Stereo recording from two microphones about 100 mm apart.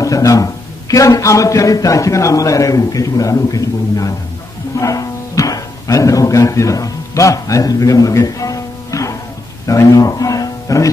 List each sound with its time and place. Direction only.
0.0 s a man's voice: 35° left (ahead or behind)